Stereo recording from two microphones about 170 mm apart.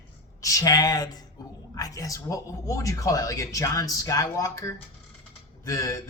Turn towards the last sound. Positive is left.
turn(degrees=20)  # may be behind; listen again after turning